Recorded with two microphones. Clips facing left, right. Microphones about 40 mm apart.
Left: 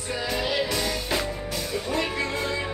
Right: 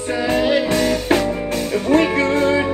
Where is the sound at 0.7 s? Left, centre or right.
Right.